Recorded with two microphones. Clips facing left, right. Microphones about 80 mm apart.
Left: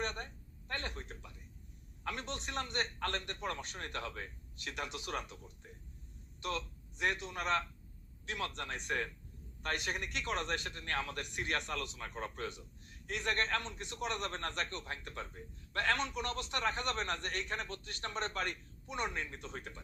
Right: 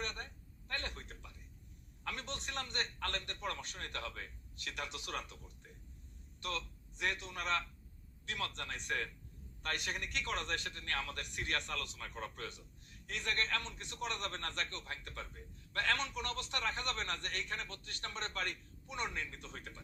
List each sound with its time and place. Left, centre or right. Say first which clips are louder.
0.0 s a sound: left 4 dB; centre
2.0 s a man's voice: left 3 dB; centre
6.4 s a man's voice: left 3 dB; centre
19.1 s a man's voice: left 3 dB; left